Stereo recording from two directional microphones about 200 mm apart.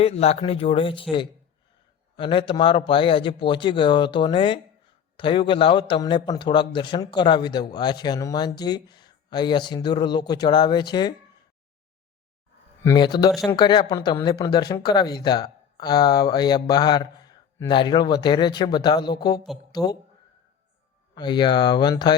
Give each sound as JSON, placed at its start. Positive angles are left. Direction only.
{"t": 0.0, "sound": "a man's voice", "side_deg": 30}
{"t": 2.1, "sound": "a man's voice", "side_deg": 25}
{"t": 12.8, "sound": "a man's voice", "side_deg": 20}
{"t": 21.2, "sound": "a man's voice", "side_deg": 20}